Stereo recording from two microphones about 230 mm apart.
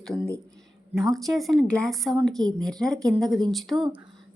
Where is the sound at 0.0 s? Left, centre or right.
Centre.